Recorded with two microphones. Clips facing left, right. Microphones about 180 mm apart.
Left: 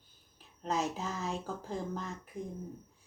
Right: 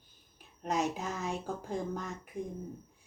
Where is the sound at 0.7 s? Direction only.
15° right (ahead or behind).